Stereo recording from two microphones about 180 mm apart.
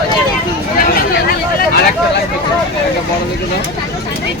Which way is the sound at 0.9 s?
60° left (ahead or behind).